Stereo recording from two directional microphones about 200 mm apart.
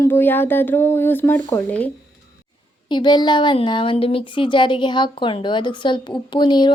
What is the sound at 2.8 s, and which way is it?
Speech, 20° left (ahead or behind).